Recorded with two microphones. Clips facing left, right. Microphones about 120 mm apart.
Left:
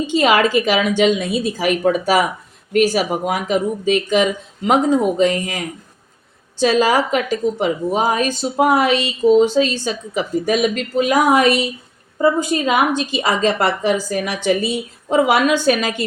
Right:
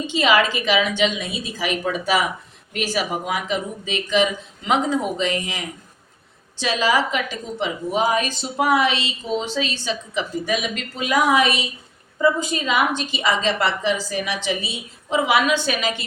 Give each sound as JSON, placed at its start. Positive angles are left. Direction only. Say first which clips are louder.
{"t": 0.1, "sound": "a woman's voice", "louder": "left 4 dB", "side_deg": 45}